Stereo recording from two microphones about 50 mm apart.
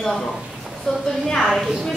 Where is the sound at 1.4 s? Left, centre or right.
Centre.